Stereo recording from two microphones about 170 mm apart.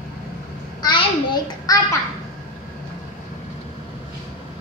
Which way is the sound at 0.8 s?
25° left (ahead or behind).